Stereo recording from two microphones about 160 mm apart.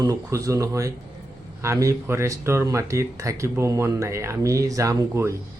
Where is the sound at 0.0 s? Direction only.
20° right (ahead or behind).